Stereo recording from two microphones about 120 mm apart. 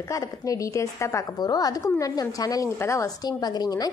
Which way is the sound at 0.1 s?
30° left (ahead or behind).